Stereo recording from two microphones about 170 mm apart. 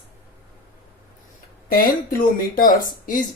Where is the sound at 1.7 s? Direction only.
55° left (ahead or behind).